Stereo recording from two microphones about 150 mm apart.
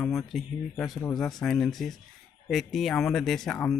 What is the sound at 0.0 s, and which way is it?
Speech, centre (ahead or behind).